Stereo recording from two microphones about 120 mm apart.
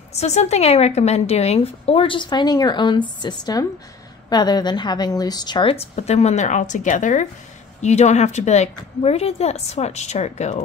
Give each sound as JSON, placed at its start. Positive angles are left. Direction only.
{"t": 0.1, "sound": "a woman's voice", "side_deg": 65}
{"t": 5.9, "sound": "a woman's voice", "side_deg": 65}
{"t": 7.8, "sound": "a woman's voice", "side_deg": 70}